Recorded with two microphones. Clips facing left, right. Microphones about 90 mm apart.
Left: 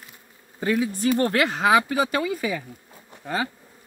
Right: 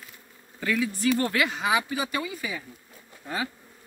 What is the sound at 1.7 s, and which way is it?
Speech, 75° left (ahead or behind).